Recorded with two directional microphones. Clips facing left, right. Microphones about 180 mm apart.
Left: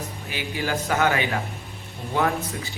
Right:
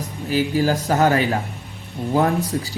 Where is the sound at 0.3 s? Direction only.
40° right (ahead or behind).